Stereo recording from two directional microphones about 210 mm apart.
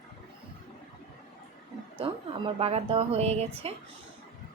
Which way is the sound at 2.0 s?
25° right (ahead or behind).